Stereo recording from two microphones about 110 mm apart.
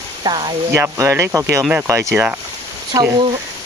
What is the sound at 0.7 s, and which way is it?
Speech, 25° right (ahead or behind).